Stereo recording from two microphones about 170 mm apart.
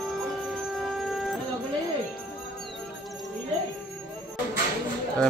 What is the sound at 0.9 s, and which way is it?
Music, centre (ahead or behind).